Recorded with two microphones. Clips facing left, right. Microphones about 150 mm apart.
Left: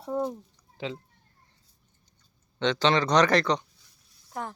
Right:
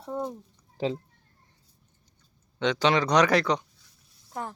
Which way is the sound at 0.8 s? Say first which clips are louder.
Right 6 dB; 40° right (ahead or behind).